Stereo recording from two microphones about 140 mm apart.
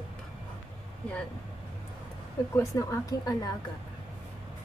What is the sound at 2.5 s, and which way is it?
Speech, 20° left (ahead or behind).